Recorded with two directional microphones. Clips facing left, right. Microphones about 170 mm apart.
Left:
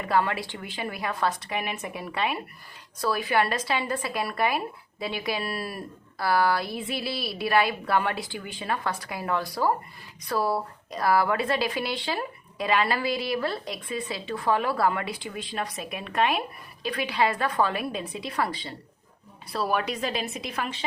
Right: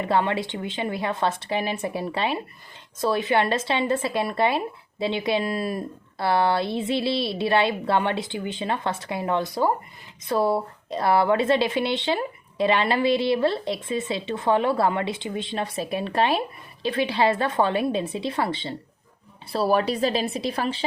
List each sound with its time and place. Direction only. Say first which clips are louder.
0.0 s speech: right 3 dB; 25° right (ahead or behind)